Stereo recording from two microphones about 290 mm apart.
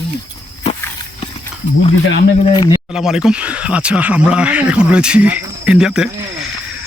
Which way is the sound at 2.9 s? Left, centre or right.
Centre.